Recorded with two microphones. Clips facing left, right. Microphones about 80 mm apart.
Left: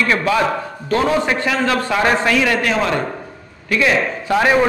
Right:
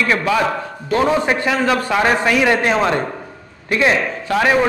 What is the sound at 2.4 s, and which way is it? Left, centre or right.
A man's voice, right.